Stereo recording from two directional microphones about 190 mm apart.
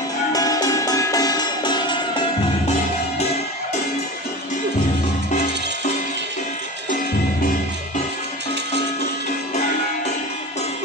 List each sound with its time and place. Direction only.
0.3 s music: 20° left (ahead or behind)